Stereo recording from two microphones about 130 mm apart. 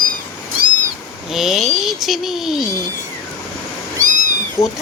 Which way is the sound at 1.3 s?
Centre (ahead or behind).